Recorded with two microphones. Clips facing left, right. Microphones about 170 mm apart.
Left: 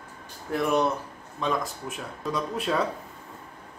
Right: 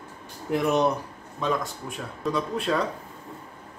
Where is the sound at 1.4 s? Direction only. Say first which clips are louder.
Right 1 dB; centre (ahead or behind).